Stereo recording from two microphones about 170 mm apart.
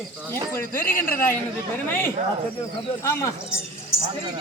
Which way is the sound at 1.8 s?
10° left (ahead or behind).